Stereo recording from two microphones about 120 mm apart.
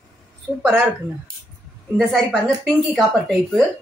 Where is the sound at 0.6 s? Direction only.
15° right (ahead or behind).